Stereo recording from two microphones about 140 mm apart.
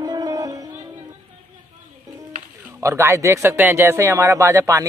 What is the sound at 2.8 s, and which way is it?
Speech, 20° right (ahead or behind).